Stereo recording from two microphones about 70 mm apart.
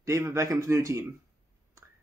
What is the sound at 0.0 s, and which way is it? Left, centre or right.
Speech, right.